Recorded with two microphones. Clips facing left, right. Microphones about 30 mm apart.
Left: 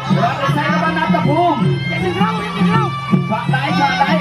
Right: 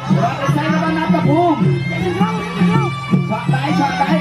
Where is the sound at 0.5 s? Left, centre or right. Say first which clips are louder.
Left 1 dB; centre.